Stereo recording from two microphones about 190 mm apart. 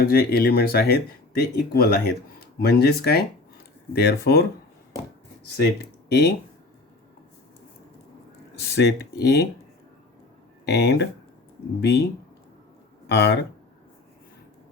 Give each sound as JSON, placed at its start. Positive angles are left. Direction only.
{"t": 0.0, "sound": "speech", "side_deg": 50}
{"t": 6.1, "sound": "speech", "side_deg": 60}
{"t": 8.7, "sound": "speech", "side_deg": 60}
{"t": 10.7, "sound": "speech", "side_deg": 60}
{"t": 13.1, "sound": "speech", "side_deg": 65}